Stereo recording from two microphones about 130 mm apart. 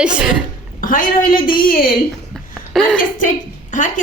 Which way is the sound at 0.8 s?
90° left.